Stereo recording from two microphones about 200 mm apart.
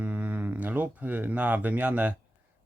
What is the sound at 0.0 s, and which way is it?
Speech, 5° right (ahead or behind).